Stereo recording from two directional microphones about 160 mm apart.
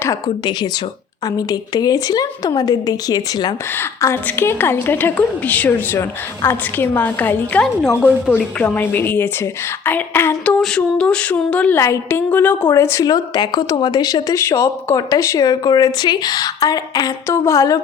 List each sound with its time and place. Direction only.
1.4 s speech: 25° left (ahead or behind)
3.8 s a woman's voice: 15° left (ahead or behind)